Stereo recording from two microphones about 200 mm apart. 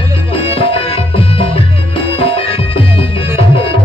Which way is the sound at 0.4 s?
25° left (ahead or behind).